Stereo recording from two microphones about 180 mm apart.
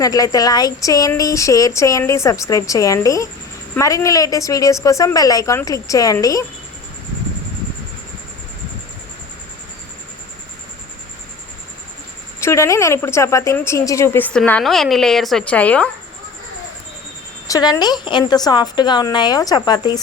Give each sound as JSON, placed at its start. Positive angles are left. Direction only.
{"t": 0.0, "sound": "speech", "side_deg": 20}
{"t": 12.4, "sound": "a woman's voice", "side_deg": 15}
{"t": 17.5, "sound": "speech", "side_deg": 25}